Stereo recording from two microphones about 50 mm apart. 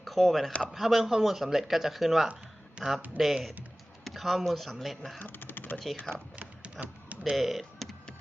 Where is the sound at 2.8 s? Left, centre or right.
Centre.